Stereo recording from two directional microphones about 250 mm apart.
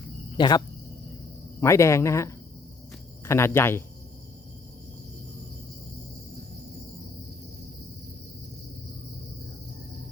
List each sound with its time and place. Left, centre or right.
0.3 s speech: centre
1.6 s speech: centre